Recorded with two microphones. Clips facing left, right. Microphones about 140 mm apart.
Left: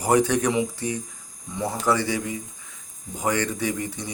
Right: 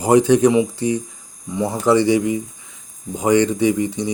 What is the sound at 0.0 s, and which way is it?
Speech, 25° right (ahead or behind).